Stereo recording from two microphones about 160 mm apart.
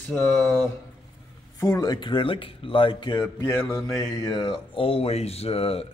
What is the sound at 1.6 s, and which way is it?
Speech, 20° left (ahead or behind).